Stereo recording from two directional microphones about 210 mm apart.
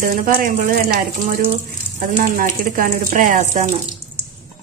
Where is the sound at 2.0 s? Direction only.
40° right (ahead or behind).